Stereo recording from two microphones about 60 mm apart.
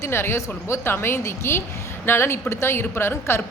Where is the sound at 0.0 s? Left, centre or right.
Left.